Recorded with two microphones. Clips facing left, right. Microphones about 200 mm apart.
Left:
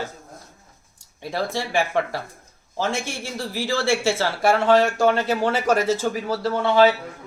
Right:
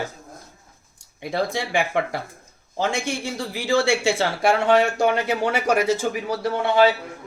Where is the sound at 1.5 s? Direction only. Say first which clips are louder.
Even; 15° right (ahead or behind).